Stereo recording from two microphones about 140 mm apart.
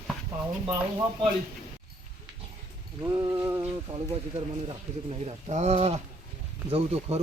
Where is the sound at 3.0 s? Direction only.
20° right (ahead or behind).